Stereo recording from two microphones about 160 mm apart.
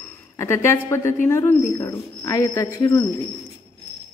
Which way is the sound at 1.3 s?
15° left (ahead or behind).